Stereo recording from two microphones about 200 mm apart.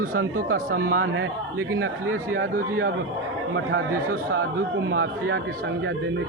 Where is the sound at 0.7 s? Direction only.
75° right (ahead or behind).